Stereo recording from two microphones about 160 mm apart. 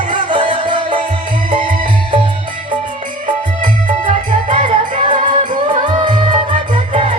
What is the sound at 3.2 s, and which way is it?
Music, 50° right (ahead or behind).